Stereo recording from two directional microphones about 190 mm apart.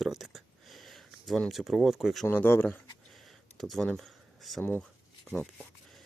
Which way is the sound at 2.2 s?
10° left (ahead or behind).